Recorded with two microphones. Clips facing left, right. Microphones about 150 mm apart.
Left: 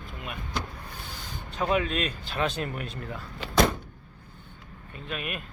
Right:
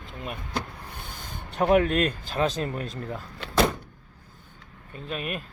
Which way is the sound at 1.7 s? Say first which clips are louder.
Right 7 dB; 55° right (ahead or behind).